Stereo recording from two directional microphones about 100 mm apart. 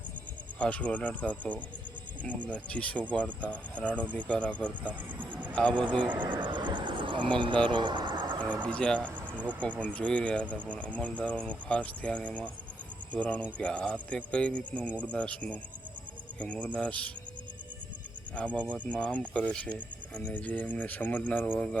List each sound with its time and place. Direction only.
0.6 s speech: 10° left (ahead or behind)
5.3 s a sound: 15° right (ahead or behind)
5.5 s speech: 10° left (ahead or behind)
6.3 s a sound: 50° right (ahead or behind)
8.6 s speech: 10° left (ahead or behind)
18.3 s speech: 10° left (ahead or behind)